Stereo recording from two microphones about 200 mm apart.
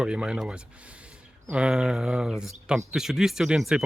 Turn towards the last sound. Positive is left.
turn(degrees=0)  # may be behind; listen again after turning